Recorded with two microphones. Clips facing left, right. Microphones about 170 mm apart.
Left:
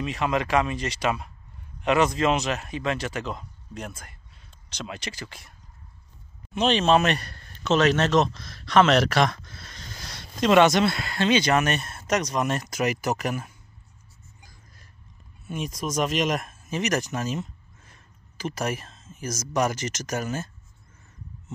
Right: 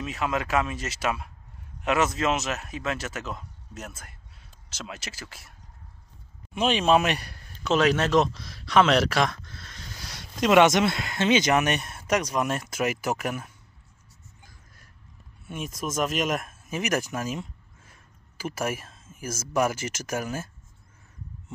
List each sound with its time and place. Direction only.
0.0 s speech: centre (ahead or behind)
6.5 s a man's voice: 5° right (ahead or behind)
15.4 s speech: 5° right (ahead or behind)